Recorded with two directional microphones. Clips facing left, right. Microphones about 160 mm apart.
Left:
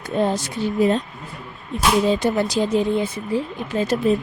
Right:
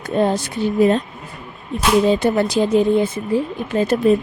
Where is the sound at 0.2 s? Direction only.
60° right (ahead or behind).